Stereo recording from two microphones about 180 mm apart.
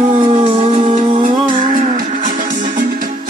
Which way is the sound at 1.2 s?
45° right (ahead or behind).